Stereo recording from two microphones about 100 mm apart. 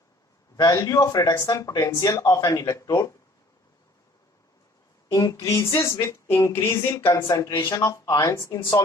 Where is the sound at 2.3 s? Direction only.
40° left (ahead or behind).